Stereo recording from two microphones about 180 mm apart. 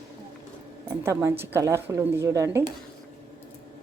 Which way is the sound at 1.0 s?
15° right (ahead or behind).